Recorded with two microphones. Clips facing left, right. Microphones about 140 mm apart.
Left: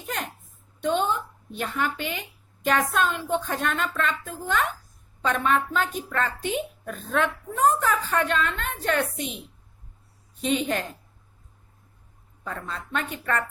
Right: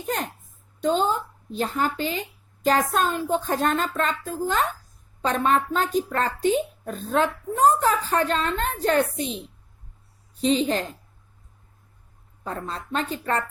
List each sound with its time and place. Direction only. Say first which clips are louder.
0.0 s a woman's voice: right 4 dB; 35° right (ahead or behind)
10.4 s a woman's voice: right 4 dB; 30° right (ahead or behind)
12.5 s speech: right 3 dB; 35° right (ahead or behind)